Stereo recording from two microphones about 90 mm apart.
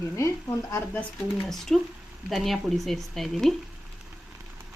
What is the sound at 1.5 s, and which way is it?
Speech, 5° left (ahead or behind).